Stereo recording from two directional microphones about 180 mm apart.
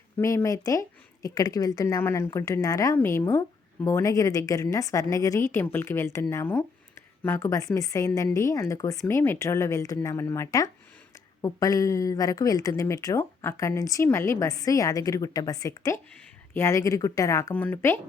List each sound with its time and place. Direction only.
0.2 s a woman's voice: 15° left (ahead or behind)